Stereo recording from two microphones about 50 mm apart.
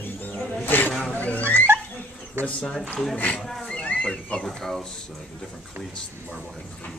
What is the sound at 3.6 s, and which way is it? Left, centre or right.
Horse, left.